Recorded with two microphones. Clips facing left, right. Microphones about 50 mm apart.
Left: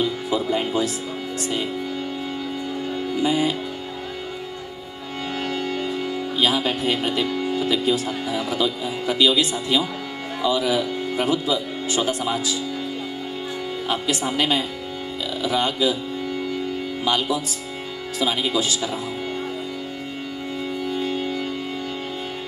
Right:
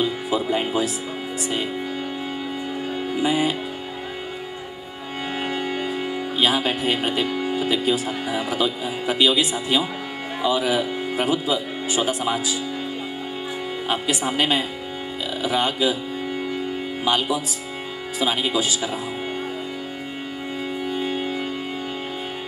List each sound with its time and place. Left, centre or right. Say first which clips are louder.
0.0 s speech: even; centre
3.2 s speech: even; centre
5.4 s music: even; centre
6.3 s speech: right 1 dB; right
13.8 s speech: even; centre
17.0 s speech: right 1 dB; right
20.9 s music: even; centre